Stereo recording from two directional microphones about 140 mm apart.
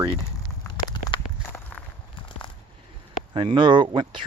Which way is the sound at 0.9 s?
30° left (ahead or behind).